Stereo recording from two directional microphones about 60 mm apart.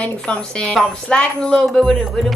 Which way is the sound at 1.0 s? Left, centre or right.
Centre.